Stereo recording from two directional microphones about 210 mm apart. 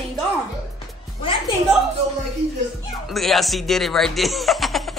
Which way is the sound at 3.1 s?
Centre (ahead or behind).